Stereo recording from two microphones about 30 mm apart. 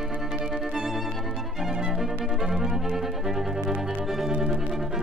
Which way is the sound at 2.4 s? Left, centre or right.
Centre.